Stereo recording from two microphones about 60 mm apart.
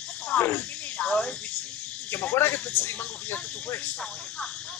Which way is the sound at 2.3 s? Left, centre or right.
Left.